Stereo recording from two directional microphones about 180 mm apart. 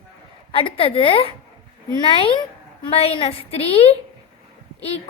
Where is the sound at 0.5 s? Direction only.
30° left (ahead or behind).